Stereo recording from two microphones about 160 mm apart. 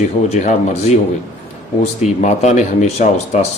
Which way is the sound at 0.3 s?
45° left (ahead or behind).